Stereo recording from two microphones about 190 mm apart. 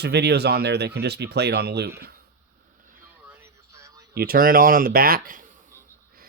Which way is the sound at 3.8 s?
15° right (ahead or behind).